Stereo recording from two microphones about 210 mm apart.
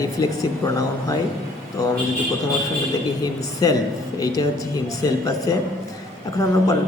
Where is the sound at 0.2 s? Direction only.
20° left (ahead or behind).